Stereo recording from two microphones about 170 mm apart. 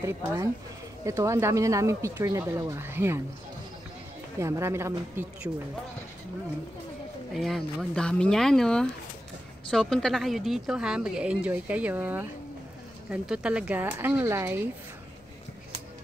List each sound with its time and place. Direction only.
0.0 s speech: 15° right (ahead or behind)
4.4 s speech: 15° right (ahead or behind)
7.3 s a woman's voice: centre (ahead or behind)